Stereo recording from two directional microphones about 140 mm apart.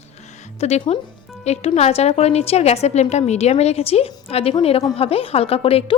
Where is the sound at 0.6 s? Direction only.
50° left (ahead or behind).